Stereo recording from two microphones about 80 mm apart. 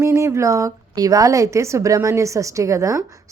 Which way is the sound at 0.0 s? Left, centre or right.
Right.